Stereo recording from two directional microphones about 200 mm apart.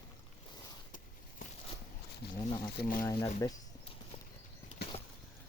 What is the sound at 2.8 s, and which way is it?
Speech, 45° left (ahead or behind).